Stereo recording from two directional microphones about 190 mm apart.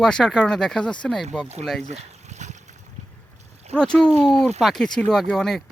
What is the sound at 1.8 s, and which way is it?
Boat, 40° right (ahead or behind).